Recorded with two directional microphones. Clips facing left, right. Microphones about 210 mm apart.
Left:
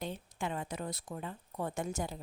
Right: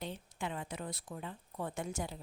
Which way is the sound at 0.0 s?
45° left (ahead or behind).